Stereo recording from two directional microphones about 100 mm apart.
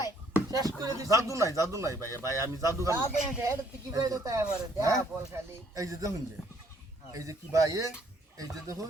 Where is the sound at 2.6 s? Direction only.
30° right (ahead or behind).